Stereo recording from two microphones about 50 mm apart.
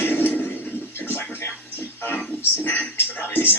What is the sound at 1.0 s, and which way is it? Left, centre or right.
Television, left.